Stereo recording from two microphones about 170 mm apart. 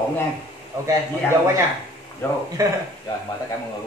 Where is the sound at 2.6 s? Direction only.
20° right (ahead or behind).